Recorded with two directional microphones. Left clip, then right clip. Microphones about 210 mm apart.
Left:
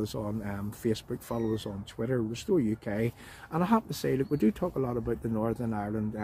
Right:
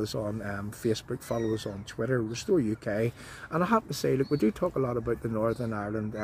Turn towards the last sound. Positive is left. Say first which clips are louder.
# right 1 dB
turn(degrees=0)  # may be behind; listen again after turning